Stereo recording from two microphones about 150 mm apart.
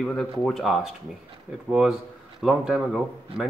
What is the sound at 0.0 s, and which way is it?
Speech, 5° left (ahead or behind).